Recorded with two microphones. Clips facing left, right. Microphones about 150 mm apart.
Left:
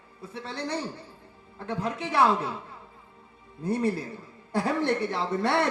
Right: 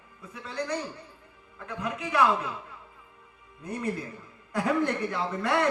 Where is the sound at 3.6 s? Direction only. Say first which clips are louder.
Left 5 dB; 35° left (ahead or behind).